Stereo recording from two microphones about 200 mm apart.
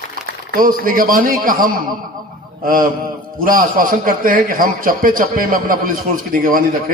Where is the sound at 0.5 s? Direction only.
45° right (ahead or behind).